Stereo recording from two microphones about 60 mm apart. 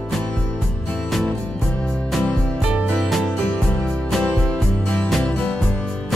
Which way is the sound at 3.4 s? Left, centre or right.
Centre.